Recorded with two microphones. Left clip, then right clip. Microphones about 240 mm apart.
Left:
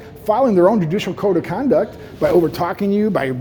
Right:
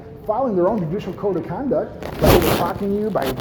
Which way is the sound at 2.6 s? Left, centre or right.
Left.